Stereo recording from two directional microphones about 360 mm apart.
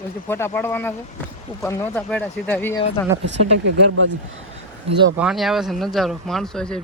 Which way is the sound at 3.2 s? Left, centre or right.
Right.